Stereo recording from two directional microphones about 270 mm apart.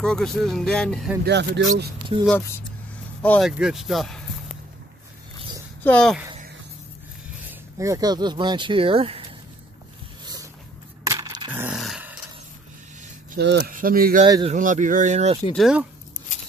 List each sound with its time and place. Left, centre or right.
0.0 s speech: centre
1.2 s speech: right
2.2 s speech: centre
5.9 s speech: centre
7.4 s speech: centre
10.2 s vehicle: centre
11.1 s coin: centre
13.3 s speech: right
14.2 s speech: centre
15.5 s speech: centre